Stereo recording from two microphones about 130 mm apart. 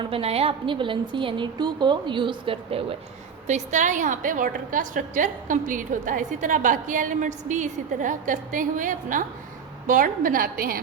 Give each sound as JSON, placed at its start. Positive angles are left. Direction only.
{"t": 0.0, "sound": "a woman's voice", "side_deg": -45}
{"t": 3.4, "sound": "a woman's voice", "side_deg": -65}